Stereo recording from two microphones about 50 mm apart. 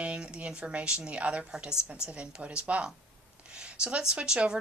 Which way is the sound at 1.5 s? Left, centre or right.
Centre.